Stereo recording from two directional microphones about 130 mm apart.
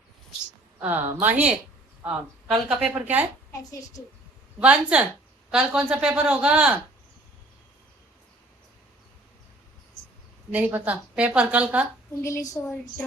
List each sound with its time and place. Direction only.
0.8 s a woman's voice: 15° right (ahead or behind)
3.6 s a woman's voice: 30° left (ahead or behind)
4.6 s a woman's voice: 10° right (ahead or behind)
10.5 s a woman's voice: 10° right (ahead or behind)
12.2 s a woman's voice: 25° left (ahead or behind)